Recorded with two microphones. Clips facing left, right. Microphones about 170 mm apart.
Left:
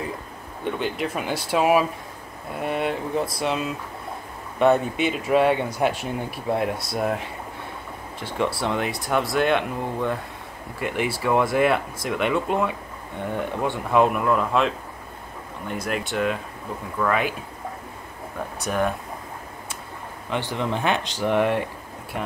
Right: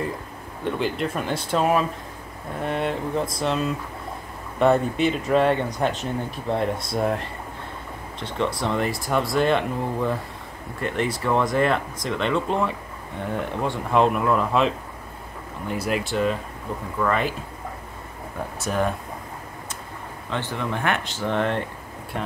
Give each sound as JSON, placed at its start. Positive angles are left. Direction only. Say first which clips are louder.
{"t": 0.7, "sound": "speech", "louder": "right 1 dB", "side_deg": 0}
{"t": 15.7, "sound": "speech", "louder": "right 2 dB", "side_deg": 0}
{"t": 18.6, "sound": "speech", "louder": "even", "side_deg": 0}
{"t": 20.2, "sound": "speech", "louder": "left 2 dB", "side_deg": 15}